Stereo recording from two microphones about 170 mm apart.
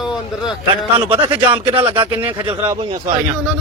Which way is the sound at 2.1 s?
10° right (ahead or behind).